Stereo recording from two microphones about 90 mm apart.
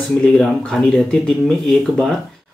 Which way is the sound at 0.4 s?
10° left (ahead or behind).